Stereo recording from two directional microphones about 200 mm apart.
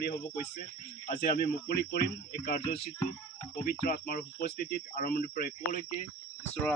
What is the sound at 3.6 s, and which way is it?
Speech, 50° left (ahead or behind).